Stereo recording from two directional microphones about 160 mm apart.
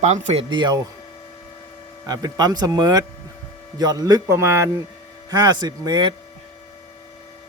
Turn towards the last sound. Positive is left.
turn(degrees=-30)  # may be behind; listen again after turning